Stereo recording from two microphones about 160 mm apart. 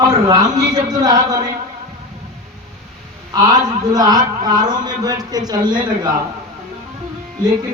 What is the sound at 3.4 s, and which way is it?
A man's voice, 25° right (ahead or behind).